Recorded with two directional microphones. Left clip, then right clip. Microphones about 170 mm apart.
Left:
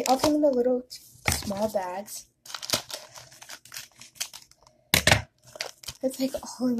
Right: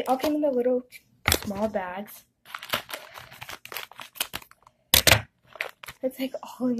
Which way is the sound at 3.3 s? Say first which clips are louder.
Right 6 dB; 25° right (ahead or behind).